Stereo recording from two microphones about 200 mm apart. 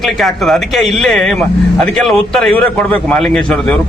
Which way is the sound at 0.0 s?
Centre (ahead or behind).